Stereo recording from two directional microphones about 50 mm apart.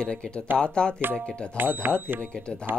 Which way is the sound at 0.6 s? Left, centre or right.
Centre.